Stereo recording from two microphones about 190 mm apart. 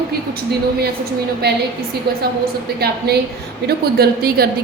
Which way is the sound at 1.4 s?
60° right (ahead or behind).